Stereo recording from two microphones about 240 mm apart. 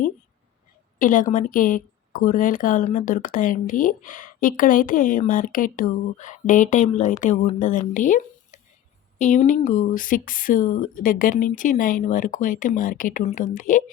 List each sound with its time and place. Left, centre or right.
0.9 s a woman's voice: left